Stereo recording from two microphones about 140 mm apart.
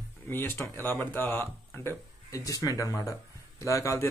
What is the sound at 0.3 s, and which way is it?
Speech, 15° left (ahead or behind).